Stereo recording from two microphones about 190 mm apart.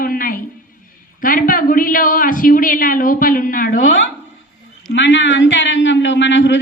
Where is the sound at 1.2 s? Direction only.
45° left (ahead or behind).